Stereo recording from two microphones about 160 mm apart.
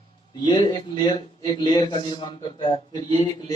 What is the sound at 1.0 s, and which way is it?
A man's voice, 30° left (ahead or behind).